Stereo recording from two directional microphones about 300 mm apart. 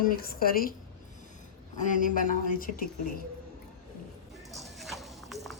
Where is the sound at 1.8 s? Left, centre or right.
Left.